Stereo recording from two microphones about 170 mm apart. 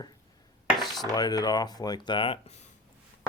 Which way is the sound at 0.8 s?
Centre (ahead or behind).